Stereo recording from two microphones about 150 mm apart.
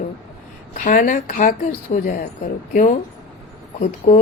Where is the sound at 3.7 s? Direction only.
50° left (ahead or behind).